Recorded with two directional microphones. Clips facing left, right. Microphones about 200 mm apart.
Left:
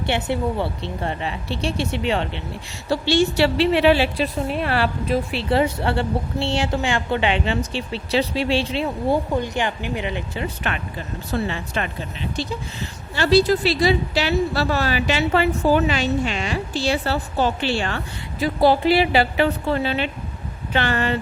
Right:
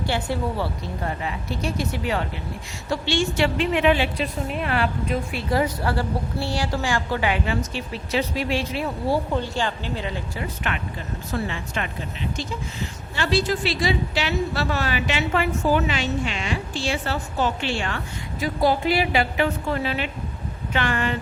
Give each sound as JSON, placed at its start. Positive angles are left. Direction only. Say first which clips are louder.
{"t": 0.0, "sound": "a woman's voice", "louder": "left 3 dB", "side_deg": 25}
{"t": 2.9, "sound": "a woman's voice", "louder": "left 5 dB", "side_deg": 35}
{"t": 11.3, "sound": "a woman's voice", "louder": "left 3 dB", "side_deg": 35}
{"t": 13.1, "sound": "a woman's voice", "louder": "left 6 dB", "side_deg": 35}